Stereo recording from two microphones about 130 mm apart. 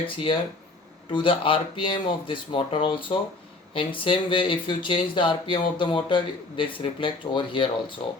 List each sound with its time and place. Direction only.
0.0 s speech: 40° left (ahead or behind)